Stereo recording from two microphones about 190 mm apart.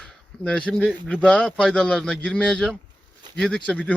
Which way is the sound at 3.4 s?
5° left (ahead or behind).